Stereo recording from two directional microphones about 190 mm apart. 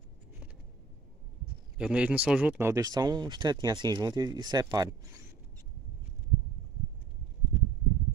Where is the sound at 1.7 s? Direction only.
5° right (ahead or behind).